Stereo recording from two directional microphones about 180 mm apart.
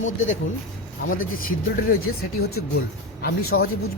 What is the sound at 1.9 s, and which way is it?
Speech, 60° left (ahead or behind).